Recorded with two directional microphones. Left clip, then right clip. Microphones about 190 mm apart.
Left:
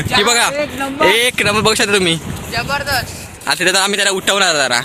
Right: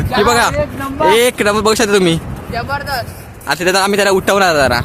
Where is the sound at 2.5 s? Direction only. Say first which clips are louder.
Left 1 dB; 65° right (ahead or behind).